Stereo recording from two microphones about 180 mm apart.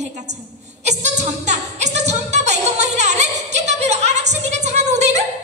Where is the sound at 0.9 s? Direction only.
40° right (ahead or behind).